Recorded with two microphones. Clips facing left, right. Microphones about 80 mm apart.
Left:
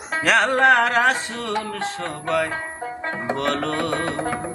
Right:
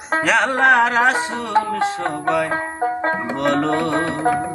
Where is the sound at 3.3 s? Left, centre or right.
Centre.